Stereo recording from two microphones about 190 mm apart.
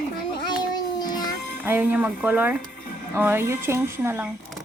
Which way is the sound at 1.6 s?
10° right (ahead or behind).